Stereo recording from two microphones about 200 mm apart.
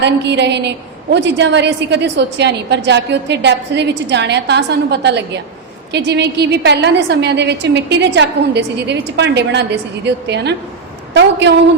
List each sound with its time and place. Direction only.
0.0 s a woman's voice: 60° right (ahead or behind)